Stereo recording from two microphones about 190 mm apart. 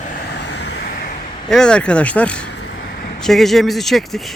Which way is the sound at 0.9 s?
50° left (ahead or behind).